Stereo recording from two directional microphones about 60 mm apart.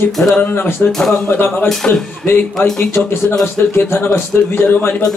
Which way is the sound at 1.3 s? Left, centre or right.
Left.